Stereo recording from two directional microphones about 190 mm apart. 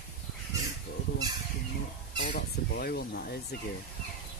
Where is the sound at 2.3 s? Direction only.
55° left (ahead or behind).